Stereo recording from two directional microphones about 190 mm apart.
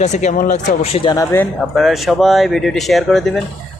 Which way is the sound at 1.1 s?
15° left (ahead or behind).